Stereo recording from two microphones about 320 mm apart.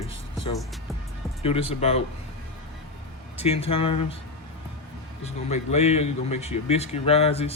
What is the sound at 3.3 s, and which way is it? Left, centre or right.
Speech, centre.